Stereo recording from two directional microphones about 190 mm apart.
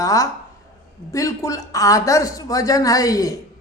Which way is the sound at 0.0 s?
15° left (ahead or behind).